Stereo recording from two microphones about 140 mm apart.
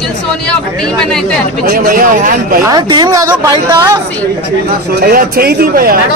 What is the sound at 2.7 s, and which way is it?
A man's voice, 30° right (ahead or behind).